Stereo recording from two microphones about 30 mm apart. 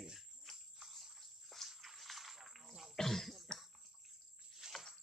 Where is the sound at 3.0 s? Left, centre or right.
Centre.